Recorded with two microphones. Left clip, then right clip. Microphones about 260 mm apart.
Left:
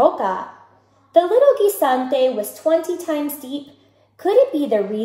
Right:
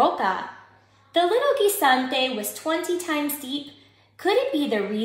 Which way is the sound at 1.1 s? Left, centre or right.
Right.